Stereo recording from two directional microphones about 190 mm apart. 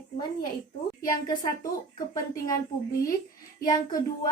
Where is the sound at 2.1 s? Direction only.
20° left (ahead or behind).